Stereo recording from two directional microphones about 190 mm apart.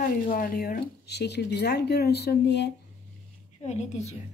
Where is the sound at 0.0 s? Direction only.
45° left (ahead or behind); by 2.7 s 65° left (ahead or behind).